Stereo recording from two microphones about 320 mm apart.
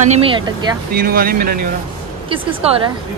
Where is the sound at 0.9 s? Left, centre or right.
Right.